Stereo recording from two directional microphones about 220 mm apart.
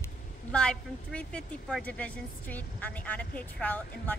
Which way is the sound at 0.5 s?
5° left (ahead or behind).